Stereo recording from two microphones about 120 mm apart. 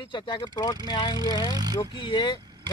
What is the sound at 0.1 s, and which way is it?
Speech, 40° left (ahead or behind).